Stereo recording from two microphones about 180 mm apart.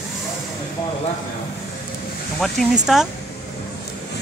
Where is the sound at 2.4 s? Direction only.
Centre (ahead or behind).